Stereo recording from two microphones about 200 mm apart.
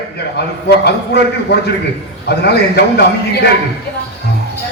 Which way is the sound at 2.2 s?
55° left (ahead or behind).